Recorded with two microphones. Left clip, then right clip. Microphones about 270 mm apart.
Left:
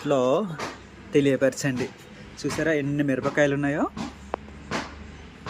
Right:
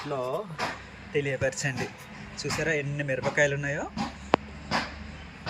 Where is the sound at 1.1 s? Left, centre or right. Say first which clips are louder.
Left 7 dB; left.